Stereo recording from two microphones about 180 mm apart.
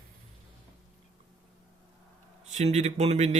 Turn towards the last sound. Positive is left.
turn(degrees=-40)  # may be behind; listen again after turning